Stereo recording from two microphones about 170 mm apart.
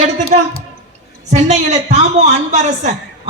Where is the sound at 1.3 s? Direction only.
40° right (ahead or behind).